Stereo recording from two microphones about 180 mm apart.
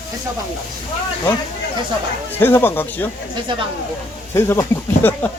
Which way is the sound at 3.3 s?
25° right (ahead or behind).